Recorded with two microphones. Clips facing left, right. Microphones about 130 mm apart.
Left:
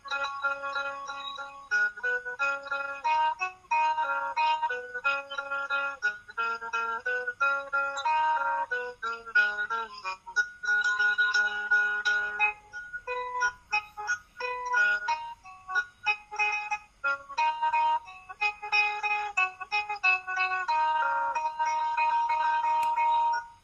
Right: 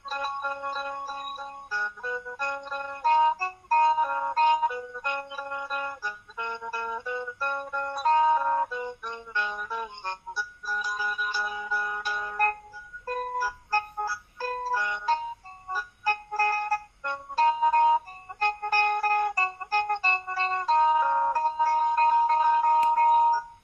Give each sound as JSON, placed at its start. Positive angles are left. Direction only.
{"t": 0.1, "sound": "music", "side_deg": -30}